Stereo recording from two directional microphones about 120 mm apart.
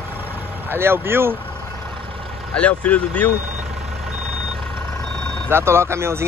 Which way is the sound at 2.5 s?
10° left (ahead or behind).